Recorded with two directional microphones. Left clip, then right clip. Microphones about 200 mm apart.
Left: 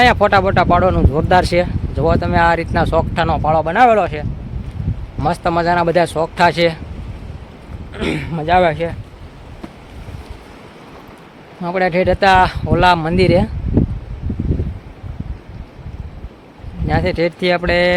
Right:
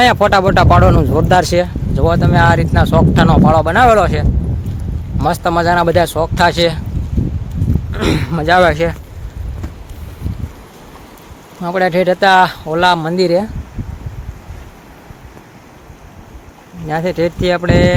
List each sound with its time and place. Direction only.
0.0 s speech: 15° right (ahead or behind)
5.2 s speech: 15° right (ahead or behind)
7.9 s speech: 25° right (ahead or behind)
11.6 s speech: 15° right (ahead or behind)
16.9 s speech: 5° right (ahead or behind)